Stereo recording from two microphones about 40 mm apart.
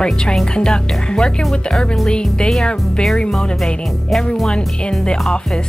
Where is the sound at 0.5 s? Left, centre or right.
Left.